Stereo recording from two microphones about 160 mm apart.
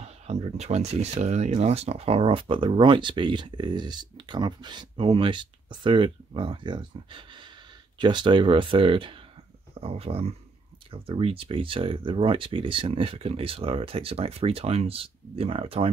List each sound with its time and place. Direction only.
0.0 s speech: 40° right (ahead or behind)